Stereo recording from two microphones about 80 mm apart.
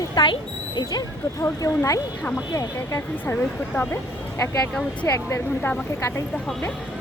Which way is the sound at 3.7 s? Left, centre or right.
Left.